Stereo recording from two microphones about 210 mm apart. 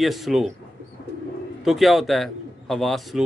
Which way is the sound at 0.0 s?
Centre (ahead or behind).